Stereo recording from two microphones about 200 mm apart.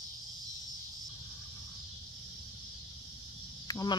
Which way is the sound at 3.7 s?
20° left (ahead or behind).